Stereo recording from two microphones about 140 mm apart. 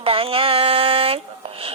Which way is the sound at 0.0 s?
40° right (ahead or behind).